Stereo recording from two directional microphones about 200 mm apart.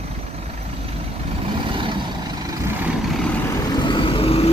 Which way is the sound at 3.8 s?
25° left (ahead or behind).